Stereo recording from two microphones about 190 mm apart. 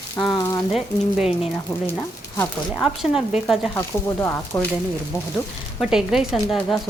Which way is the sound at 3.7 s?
15° left (ahead or behind).